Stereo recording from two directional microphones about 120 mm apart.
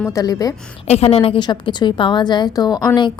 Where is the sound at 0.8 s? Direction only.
60° left (ahead or behind).